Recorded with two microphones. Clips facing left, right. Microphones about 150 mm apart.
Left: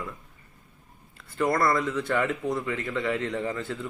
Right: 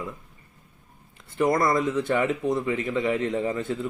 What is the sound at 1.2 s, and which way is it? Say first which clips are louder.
Speech: right 2 dB; 20° right (ahead or behind).